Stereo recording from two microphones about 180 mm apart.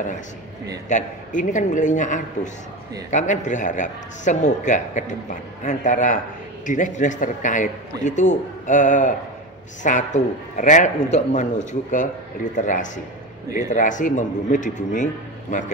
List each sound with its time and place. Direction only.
0.8 s a man's voice: 45° left (ahead or behind)
12.5 s a man's voice: 45° left (ahead or behind)